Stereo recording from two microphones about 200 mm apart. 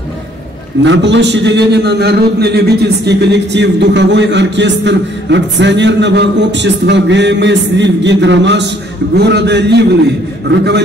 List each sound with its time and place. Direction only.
0.8 s a man's voice: 65° right (ahead or behind)